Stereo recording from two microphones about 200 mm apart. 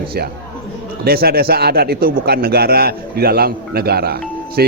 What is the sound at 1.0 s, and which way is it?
Speech, 50° right (ahead or behind).